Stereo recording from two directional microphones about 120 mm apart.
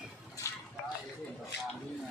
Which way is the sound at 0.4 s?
25° left (ahead or behind).